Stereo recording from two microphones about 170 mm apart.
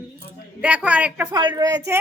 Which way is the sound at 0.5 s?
10° right (ahead or behind).